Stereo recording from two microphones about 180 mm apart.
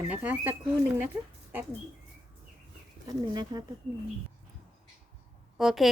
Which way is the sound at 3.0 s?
20° right (ahead or behind).